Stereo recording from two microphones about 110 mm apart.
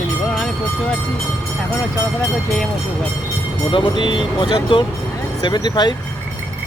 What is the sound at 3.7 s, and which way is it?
Speech, 45° left (ahead or behind).